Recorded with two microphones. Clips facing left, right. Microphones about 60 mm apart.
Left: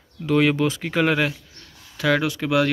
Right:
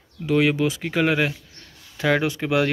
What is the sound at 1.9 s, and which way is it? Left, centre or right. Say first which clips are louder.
Speech: even; centre.